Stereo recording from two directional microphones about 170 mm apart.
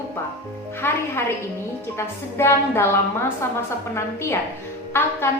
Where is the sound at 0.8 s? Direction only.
15° left (ahead or behind).